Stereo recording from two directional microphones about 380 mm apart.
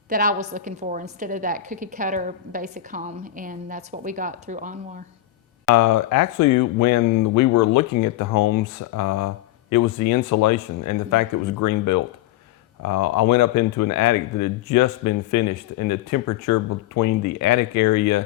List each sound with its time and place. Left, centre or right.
0.1 s a woman's voice: right
5.7 s speech: left
12.8 s speech: left